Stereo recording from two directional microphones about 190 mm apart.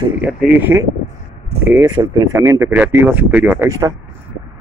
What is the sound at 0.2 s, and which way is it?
Speech, 5° right (ahead or behind).